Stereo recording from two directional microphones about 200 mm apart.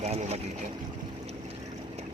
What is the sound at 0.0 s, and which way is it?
Speech, 35° right (ahead or behind).